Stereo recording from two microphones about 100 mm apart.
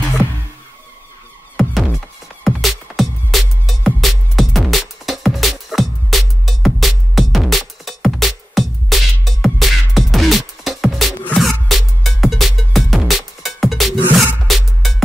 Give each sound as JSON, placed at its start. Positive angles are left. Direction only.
{"t": 1.6, "sound": "music", "side_deg": 0}